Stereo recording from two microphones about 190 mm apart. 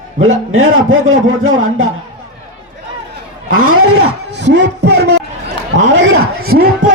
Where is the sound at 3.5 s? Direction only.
80° right.